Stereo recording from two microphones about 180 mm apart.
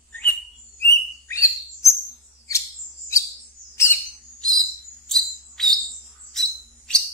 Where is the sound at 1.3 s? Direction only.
15° left (ahead or behind).